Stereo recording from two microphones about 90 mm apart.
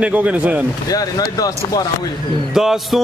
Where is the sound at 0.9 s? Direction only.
45° left (ahead or behind).